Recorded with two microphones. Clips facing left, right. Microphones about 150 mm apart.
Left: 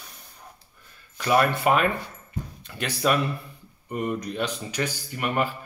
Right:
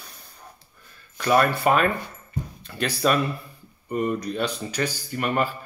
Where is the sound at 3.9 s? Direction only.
35° right (ahead or behind).